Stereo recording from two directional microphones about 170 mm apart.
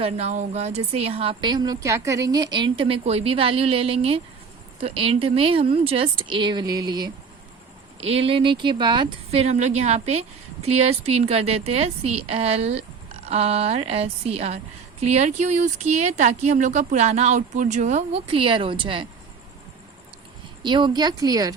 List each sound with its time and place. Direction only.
0.0 s speech: 40° right (ahead or behind); by 7.1 s 25° right (ahead or behind)
8.0 s speech: 35° right (ahead or behind)
20.6 s a woman's voice: 25° right (ahead or behind)